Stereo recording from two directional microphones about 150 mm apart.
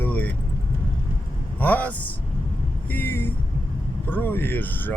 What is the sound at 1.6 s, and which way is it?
Speech, 10° left (ahead or behind).